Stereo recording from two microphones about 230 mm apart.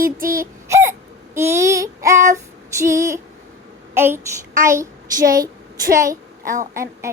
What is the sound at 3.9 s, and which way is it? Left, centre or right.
Speech, centre.